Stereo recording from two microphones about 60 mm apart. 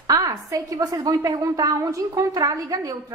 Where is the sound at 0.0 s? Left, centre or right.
Right.